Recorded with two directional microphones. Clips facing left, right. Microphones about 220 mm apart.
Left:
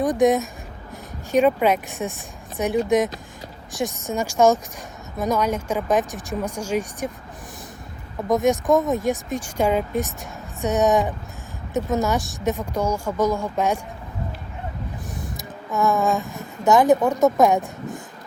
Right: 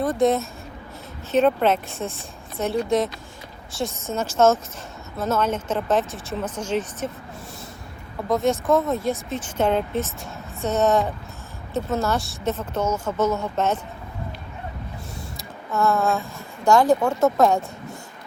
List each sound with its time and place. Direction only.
0.0 s speech: 15° left (ahead or behind)
8.3 s speech: 15° left (ahead or behind)
15.4 s speech: 15° left (ahead or behind)